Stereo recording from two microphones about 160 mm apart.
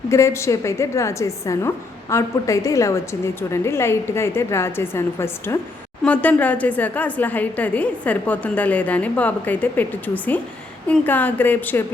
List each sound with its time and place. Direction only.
0.1 s a woman's voice: 20° left (ahead or behind)